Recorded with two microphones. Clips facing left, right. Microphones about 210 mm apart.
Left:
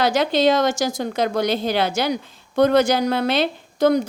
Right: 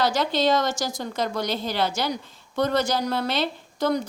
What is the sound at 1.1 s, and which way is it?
A woman's voice, 60° left (ahead or behind).